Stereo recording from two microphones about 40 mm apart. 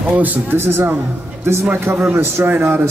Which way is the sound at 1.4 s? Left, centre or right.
Right.